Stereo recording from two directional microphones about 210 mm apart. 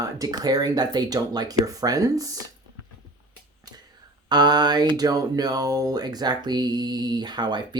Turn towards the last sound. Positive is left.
turn(degrees=-20)  # may be behind; listen again after turning